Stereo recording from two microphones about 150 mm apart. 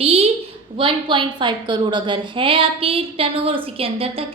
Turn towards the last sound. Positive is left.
turn(degrees=-40)  # may be behind; listen again after turning